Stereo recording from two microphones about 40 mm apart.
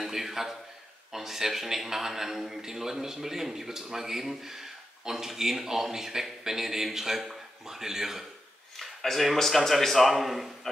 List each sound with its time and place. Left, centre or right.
0.0 s a man's voice: centre
8.7 s a man's voice: centre